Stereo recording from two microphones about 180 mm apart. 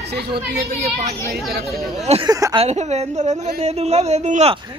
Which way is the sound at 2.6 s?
40° right (ahead or behind).